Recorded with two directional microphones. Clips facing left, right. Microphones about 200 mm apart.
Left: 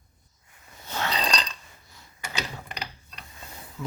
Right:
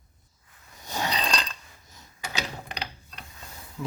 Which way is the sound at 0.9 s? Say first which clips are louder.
Even; 15° right (ahead or behind).